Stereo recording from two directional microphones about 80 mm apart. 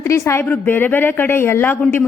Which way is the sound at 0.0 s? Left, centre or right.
Left.